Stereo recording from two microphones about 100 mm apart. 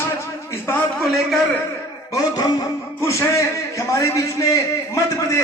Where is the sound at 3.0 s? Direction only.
30° left (ahead or behind).